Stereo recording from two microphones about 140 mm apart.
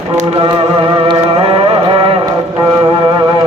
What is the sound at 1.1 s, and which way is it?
Music, 40° right (ahead or behind).